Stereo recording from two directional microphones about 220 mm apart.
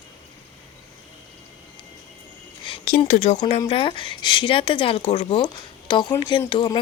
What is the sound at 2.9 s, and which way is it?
Speech, 35° left (ahead or behind).